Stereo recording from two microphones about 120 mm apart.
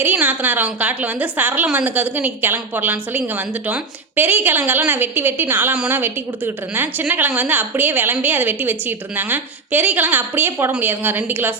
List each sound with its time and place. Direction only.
0.0 s a woman's voice: 15° right (ahead or behind)